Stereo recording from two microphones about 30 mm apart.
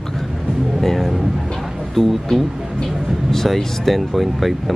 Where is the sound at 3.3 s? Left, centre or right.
Centre.